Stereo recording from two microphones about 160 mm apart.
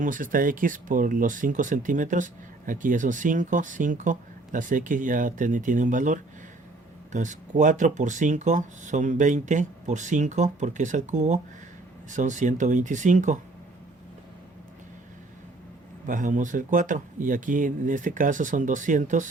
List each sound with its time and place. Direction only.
0.0 s speech: 55° right (ahead or behind)
16.0 s speech: 55° right (ahead or behind)